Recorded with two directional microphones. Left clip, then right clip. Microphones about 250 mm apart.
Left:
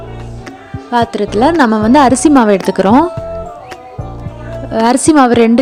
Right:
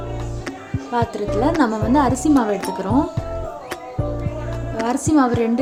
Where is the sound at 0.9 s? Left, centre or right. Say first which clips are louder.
Left 8 dB; left.